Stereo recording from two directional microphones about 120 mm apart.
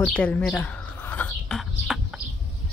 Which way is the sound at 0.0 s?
10° left (ahead or behind).